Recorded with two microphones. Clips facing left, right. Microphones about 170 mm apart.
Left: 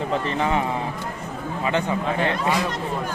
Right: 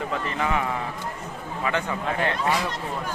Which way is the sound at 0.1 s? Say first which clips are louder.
Left 5 dB; 25° left (ahead or behind).